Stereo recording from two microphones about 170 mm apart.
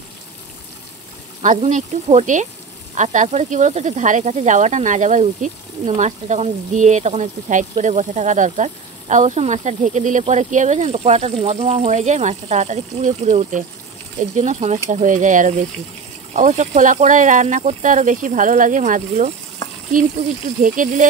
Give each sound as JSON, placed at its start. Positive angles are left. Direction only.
{"t": 1.4, "sound": "speech", "side_deg": -45}